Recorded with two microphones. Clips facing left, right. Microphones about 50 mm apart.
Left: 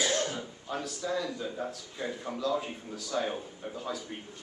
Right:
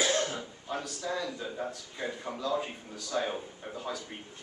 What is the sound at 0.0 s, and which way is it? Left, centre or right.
Cough, right.